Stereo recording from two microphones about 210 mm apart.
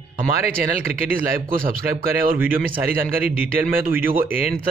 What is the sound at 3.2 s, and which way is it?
Speech, 10° right (ahead or behind).